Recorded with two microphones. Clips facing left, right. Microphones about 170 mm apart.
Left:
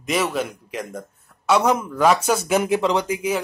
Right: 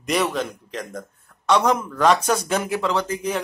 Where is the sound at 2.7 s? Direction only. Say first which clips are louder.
Left 3 dB; 20° left (ahead or behind).